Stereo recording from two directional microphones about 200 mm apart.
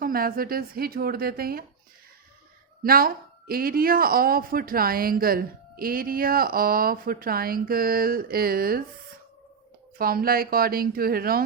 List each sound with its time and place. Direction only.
0.0 s speech: 45° right (ahead or behind)
2.8 s speech: 45° right (ahead or behind)
10.0 s speech: 45° right (ahead or behind)